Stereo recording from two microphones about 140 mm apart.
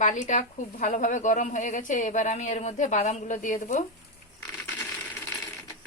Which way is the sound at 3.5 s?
55° left (ahead or behind).